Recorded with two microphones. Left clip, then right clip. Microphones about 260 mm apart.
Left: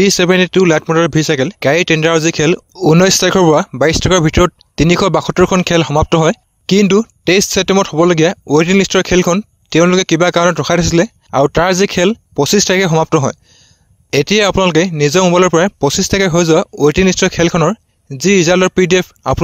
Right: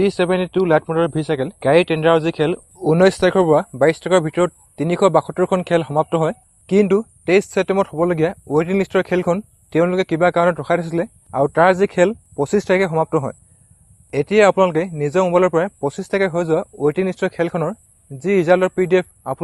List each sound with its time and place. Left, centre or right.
0.0 s speech: left
2.9 s speech: left
3.3 s speech: left
4.2 s speech: left